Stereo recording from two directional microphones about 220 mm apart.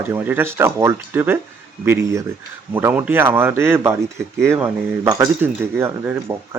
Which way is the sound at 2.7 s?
10° right (ahead or behind).